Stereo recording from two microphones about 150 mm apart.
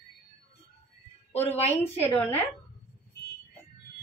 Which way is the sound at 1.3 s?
45° left (ahead or behind).